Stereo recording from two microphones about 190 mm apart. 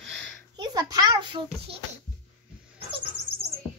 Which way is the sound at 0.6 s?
20° right (ahead or behind).